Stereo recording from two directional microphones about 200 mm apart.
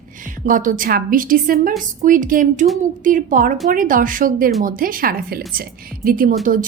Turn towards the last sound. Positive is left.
turn(degrees=-45)  # may be behind; listen again after turning